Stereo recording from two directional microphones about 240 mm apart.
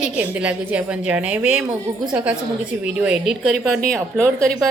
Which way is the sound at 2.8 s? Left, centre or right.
Centre.